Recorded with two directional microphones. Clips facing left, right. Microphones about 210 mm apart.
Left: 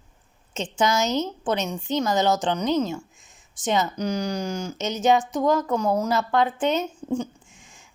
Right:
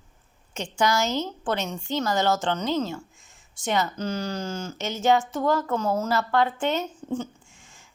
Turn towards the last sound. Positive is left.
turn(degrees=15)  # may be behind; listen again after turning